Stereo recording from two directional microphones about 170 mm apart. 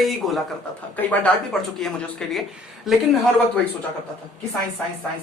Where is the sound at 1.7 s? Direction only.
Centre (ahead or behind).